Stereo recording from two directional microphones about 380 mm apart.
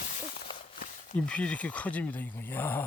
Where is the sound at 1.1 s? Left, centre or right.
Centre.